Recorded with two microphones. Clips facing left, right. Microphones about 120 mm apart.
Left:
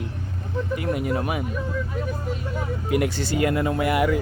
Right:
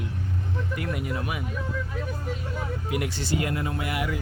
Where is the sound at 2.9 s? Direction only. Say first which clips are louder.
Left 6 dB; 50° left (ahead or behind).